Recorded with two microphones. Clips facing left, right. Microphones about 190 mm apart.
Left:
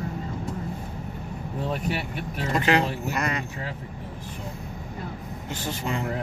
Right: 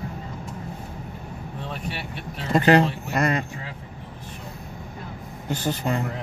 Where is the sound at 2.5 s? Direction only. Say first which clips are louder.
Right 5 dB; 35° right (ahead or behind).